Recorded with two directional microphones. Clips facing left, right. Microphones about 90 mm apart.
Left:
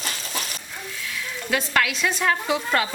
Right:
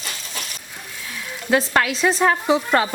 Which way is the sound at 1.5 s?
30° right (ahead or behind).